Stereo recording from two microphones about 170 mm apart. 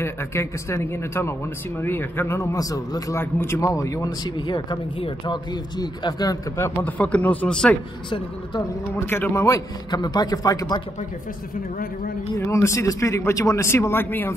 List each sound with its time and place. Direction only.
0.0 s a man's voice: 15° left (ahead or behind)
9.0 s a man's voice: 15° left (ahead or behind)
12.4 s speech: 15° left (ahead or behind)